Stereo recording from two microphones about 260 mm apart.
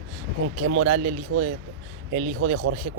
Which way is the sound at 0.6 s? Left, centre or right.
Right.